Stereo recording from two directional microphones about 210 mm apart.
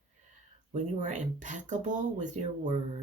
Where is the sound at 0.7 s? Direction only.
35° right (ahead or behind).